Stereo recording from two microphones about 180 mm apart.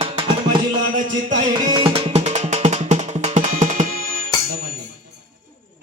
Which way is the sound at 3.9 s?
55° right (ahead or behind).